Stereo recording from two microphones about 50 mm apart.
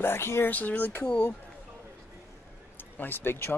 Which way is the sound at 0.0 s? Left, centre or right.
Left.